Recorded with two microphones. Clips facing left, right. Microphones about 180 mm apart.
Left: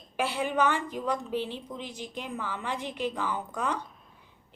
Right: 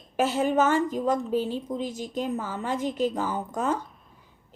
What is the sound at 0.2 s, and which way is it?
A woman's voice, 45° right (ahead or behind).